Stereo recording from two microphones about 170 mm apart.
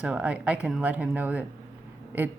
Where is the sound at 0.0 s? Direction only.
5° right (ahead or behind).